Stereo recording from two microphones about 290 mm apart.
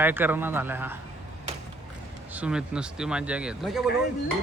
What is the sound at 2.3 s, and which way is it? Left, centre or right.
Speech, centre.